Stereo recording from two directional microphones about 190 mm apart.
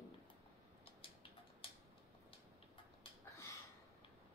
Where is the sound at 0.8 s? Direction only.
30° left (ahead or behind).